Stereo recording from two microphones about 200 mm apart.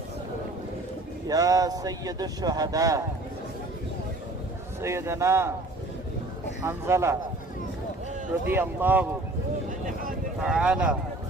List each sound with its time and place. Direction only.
1.3 s speech: 15° right (ahead or behind)
4.8 s speech: 15° right (ahead or behind)
6.7 s speech: 15° right (ahead or behind)
8.4 s speech: 10° right (ahead or behind)
9.6 s vehicle: 45° right (ahead or behind)
10.4 s speech: 5° right (ahead or behind)